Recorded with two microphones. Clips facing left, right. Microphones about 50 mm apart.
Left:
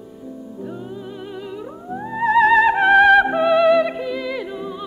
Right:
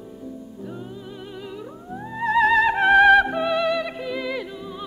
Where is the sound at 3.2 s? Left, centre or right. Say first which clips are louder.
Left 7 dB; centre.